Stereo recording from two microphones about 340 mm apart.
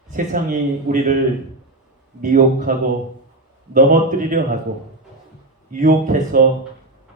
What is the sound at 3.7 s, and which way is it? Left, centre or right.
Speech, right.